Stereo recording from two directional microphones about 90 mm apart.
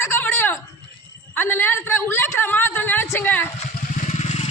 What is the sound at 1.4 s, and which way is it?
Speech, 20° left (ahead or behind).